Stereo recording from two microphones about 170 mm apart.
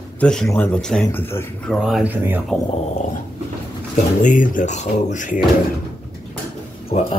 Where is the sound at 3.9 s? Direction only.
50° left (ahead or behind).